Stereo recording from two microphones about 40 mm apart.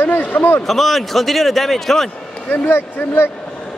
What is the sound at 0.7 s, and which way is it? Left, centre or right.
A man's voice, centre.